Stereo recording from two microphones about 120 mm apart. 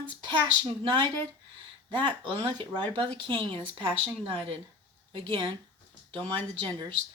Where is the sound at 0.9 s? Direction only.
45° right (ahead or behind).